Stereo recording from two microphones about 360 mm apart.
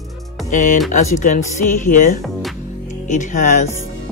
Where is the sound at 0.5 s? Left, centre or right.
Left.